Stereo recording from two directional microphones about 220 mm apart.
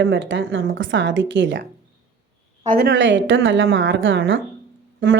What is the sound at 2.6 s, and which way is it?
A woman's voice, 45° right (ahead or behind).